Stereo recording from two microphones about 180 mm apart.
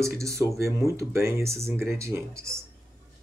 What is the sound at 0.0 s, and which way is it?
Speech, 15° right (ahead or behind).